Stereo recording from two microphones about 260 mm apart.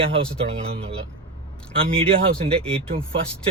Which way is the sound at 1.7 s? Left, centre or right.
Right.